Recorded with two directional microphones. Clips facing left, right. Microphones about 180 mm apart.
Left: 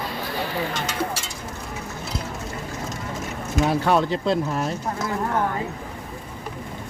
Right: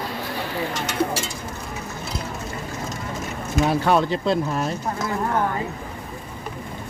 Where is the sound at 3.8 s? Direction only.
5° right (ahead or behind).